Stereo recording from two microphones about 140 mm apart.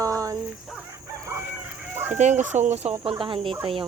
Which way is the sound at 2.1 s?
60° right (ahead or behind).